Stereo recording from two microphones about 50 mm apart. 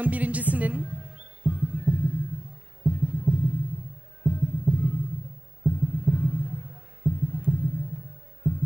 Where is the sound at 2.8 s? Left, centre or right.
Right.